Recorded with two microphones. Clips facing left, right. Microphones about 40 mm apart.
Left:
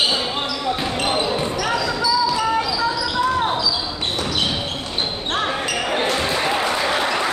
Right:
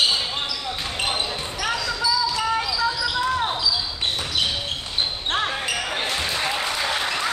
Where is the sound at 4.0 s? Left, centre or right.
Centre.